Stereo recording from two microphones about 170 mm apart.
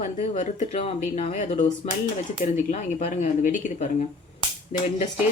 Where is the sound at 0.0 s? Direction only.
45° left (ahead or behind).